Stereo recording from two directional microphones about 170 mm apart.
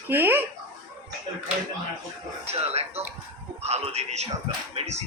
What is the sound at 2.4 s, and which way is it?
Speech, 40° right (ahead or behind).